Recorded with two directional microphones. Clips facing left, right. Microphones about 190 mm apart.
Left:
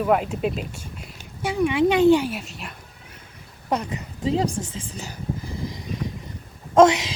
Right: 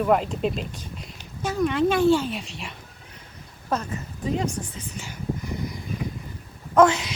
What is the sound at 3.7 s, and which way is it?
Speech, 15° left (ahead or behind).